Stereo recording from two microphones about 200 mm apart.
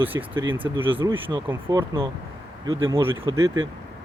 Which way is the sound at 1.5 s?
15° right (ahead or behind).